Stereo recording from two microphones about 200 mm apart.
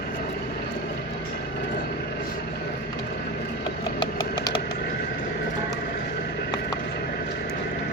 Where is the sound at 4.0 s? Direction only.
20° left (ahead or behind).